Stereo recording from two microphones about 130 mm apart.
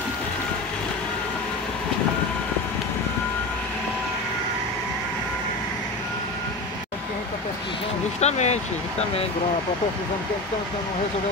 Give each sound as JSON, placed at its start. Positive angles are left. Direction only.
{"t": 8.2, "sound": "speech", "side_deg": 60}